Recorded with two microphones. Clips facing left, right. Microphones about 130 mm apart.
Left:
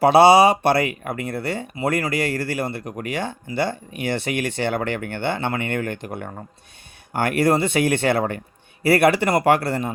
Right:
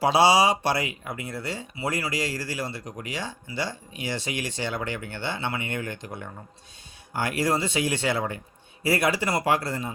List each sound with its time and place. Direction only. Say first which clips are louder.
0.0 s speech: left 7 dB; 60° left (ahead or behind)